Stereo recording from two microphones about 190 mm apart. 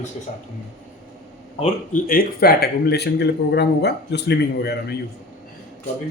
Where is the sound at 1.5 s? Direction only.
45° left (ahead or behind).